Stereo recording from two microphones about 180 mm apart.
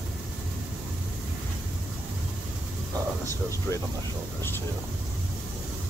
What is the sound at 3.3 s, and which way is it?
Speech, 15° left (ahead or behind).